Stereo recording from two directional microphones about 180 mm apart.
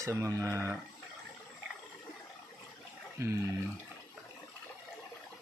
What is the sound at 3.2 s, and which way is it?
Speech, 15° right (ahead or behind).